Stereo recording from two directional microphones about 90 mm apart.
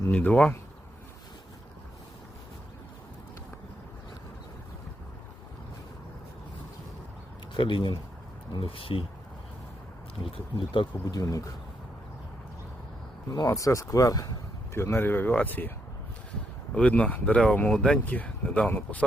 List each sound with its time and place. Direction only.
0.1 s speech: 15° left (ahead or behind)
7.5 s speech: 65° left (ahead or behind)
8.5 s speech: 85° left
10.3 s speech: 80° left
11.0 s speech: 40° left (ahead or behind)
13.3 s speech: 40° left (ahead or behind)
14.7 s speech: 25° left (ahead or behind)
16.7 s speech: 15° left (ahead or behind)